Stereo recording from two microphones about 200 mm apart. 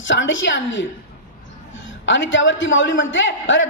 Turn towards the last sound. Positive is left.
turn(degrees=70)  # may be behind; listen again after turning